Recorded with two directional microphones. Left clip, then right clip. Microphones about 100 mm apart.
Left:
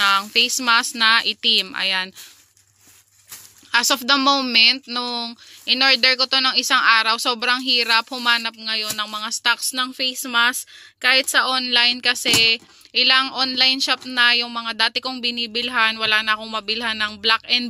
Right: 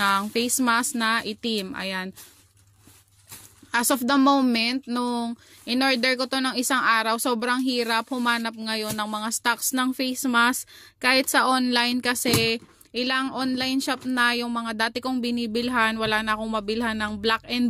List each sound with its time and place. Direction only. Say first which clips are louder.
0.0 s a sound: left 6 dB; 40° right (ahead or behind)
0.7 s a woman's voice: left 6 dB; 30° right (ahead or behind)
3.7 s speech: left 5 dB; 35° right (ahead or behind)
8.5 s speech: left 4 dB; 70° right (ahead or behind); by 9.6 s 55° right (ahead or behind)
9.7 s speech: left 3 dB; 80° right; by 12.6 s 55° right (ahead or behind)
12.9 s speech: left 9 dB; 30° right (ahead or behind)